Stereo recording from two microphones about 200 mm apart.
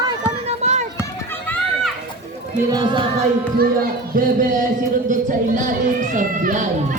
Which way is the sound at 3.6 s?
45° right (ahead or behind).